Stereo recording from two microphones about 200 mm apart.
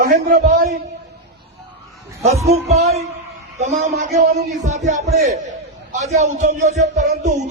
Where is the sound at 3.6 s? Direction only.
35° right (ahead or behind).